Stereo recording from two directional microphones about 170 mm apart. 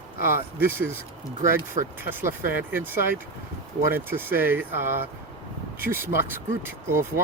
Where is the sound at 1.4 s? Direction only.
50° right (ahead or behind).